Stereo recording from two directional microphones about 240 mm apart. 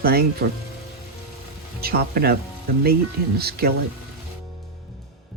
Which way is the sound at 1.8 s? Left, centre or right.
Right.